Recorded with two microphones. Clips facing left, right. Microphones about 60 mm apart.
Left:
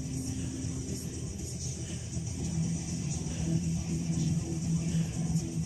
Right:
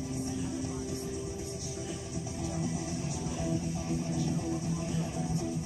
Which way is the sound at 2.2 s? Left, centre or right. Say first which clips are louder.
Even; right.